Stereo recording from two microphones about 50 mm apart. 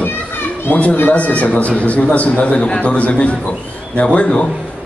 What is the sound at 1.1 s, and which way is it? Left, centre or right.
A man's voice, left.